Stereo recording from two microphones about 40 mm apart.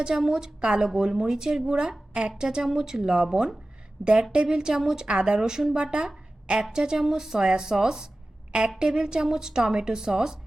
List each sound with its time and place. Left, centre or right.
0.0 s a woman's voice: centre